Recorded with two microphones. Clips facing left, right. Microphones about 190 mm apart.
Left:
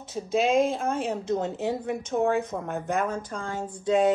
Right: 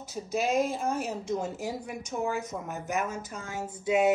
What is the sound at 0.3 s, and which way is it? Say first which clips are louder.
Speech: left 5 dB; 90° left.